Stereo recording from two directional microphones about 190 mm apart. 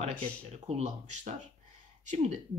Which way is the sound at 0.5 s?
35° right (ahead or behind).